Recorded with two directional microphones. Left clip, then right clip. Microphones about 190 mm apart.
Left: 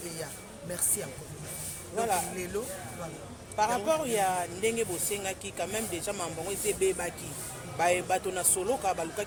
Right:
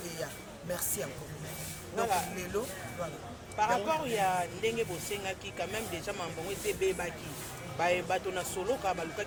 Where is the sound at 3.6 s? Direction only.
55° left (ahead or behind).